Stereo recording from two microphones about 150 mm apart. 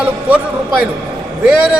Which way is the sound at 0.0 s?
10° right (ahead or behind).